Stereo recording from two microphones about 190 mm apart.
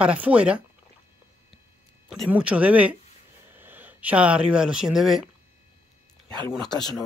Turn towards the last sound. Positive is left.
turn(degrees=20)  # may be behind; listen again after turning